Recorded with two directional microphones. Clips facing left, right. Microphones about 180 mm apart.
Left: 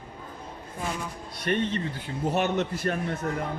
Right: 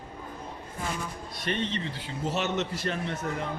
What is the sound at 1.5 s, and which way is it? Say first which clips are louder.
A man's voice: left 4 dB; 50° left (ahead or behind).